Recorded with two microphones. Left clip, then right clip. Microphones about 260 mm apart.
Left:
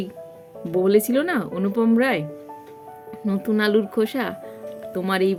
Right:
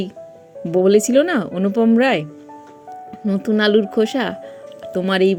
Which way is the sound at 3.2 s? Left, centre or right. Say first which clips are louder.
Right 5 dB; centre.